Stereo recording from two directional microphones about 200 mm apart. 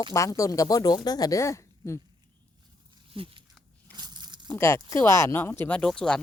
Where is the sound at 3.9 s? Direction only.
20° right (ahead or behind).